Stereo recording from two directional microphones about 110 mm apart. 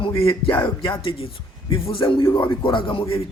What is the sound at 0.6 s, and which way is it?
A man's voice, 45° left (ahead or behind).